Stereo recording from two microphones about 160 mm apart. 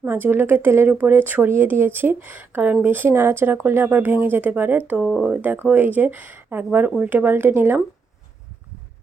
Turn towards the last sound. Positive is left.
turn(degrees=-15)  # may be behind; listen again after turning